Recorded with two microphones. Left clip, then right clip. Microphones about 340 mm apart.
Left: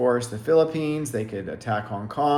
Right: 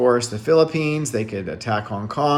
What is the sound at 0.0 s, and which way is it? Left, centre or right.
Speech, centre.